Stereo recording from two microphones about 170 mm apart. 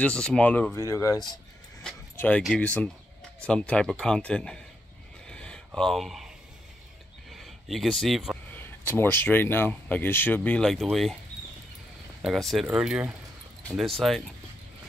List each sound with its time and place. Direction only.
0.0 s speech: 5° left (ahead or behind)
0.7 s speech: 20° left (ahead or behind)
1.8 s speech: 5° left (ahead or behind)
5.2 s a sound: 5° left (ahead or behind)
5.7 s speech: centre (ahead or behind)
7.3 s speech: centre (ahead or behind)
8.5 s speech: 10° left (ahead or behind)
12.2 s speech: centre (ahead or behind)